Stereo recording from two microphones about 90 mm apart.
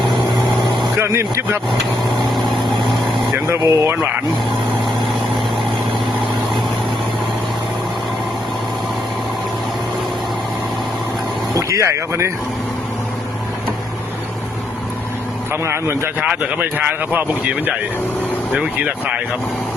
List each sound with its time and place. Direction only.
0.9 s speech: 30° right (ahead or behind)
1.8 s vehicle: centre (ahead or behind)
3.6 s speech: 35° right (ahead or behind)
11.5 s speech: 35° right (ahead or behind)
15.6 s a man's voice: 30° right (ahead or behind)
16.2 s speech: 10° right (ahead or behind)